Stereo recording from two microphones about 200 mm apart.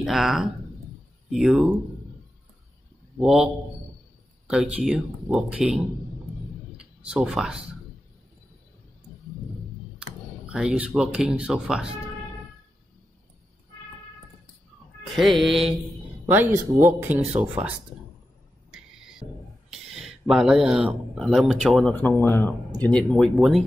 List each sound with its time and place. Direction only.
0.0 s speech: centre (ahead or behind)
3.2 s speech: 5° right (ahead or behind)
6.8 s a sound: 5° right (ahead or behind)
10.5 s speech: 5° right (ahead or behind)
15.0 s speech: centre (ahead or behind)
17.3 s speech: 35° right (ahead or behind)
18.7 s music: centre (ahead or behind)
19.7 s speech: centre (ahead or behind)